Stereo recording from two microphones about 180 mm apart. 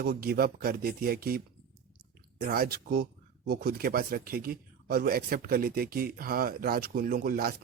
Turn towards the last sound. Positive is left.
turn(degrees=-55)  # may be behind; listen again after turning